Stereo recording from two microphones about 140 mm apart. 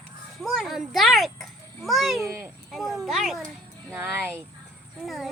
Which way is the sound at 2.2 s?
20° right (ahead or behind).